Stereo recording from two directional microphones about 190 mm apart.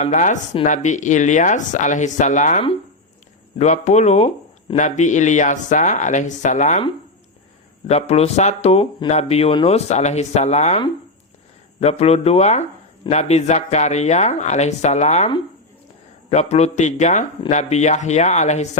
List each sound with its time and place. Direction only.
0.0 s speech: 40° left (ahead or behind)
7.9 s speech: 35° left (ahead or behind)
16.3 s speech: 35° left (ahead or behind)